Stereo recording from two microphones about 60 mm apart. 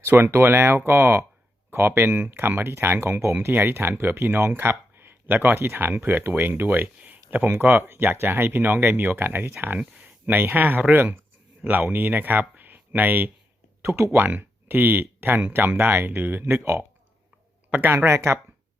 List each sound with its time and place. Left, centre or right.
0.0 s speech: right
7.0 s a sound: right
7.5 s speech: right
13.8 s speech: right
14.2 s speech: right
17.7 s speech: right
17.9 s speech: right